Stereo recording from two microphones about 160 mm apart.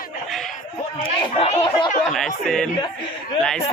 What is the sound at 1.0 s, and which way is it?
Speech, 35° left (ahead or behind).